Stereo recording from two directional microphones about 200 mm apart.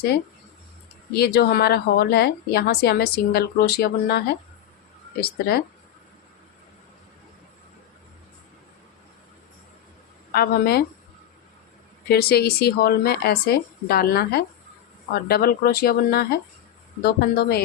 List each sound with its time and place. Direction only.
1.1 s a woman's voice: 50° left (ahead or behind)
10.3 s a woman's voice: 50° left (ahead or behind)
12.0 s a woman's voice: 50° left (ahead or behind)